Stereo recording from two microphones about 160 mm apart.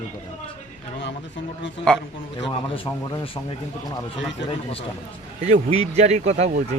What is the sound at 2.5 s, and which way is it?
Speech, 35° left (ahead or behind).